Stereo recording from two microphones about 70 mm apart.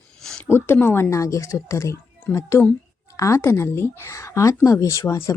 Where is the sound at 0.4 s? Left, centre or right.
Left.